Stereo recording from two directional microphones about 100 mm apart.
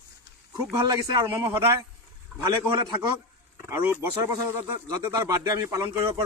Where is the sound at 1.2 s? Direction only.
25° right (ahead or behind).